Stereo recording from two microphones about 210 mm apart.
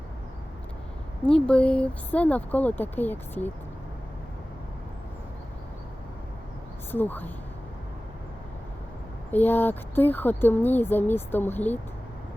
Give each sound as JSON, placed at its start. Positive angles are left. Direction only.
{"t": 1.2, "sound": "speech", "side_deg": 5}
{"t": 6.9, "sound": "speech", "side_deg": 10}
{"t": 9.3, "sound": "speech", "side_deg": 10}